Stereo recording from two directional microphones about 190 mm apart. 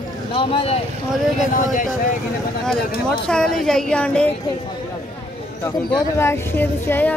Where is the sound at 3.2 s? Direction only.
5° left (ahead or behind).